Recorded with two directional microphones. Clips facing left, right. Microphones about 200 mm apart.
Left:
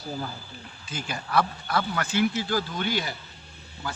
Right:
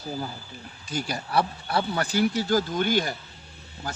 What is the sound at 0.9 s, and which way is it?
Speech, 40° right (ahead or behind).